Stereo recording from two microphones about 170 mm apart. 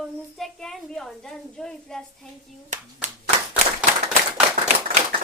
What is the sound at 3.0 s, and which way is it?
Clapping, 45° right (ahead or behind).